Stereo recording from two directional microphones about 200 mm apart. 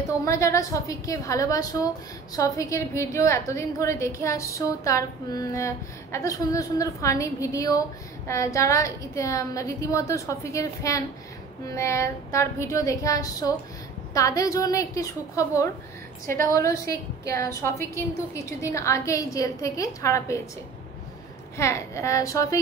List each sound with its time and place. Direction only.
0.2 s a woman's voice: 15° left (ahead or behind)
21.5 s a woman's voice: 15° left (ahead or behind)